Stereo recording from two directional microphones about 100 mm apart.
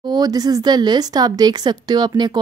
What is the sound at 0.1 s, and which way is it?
Speech, 40° right (ahead or behind).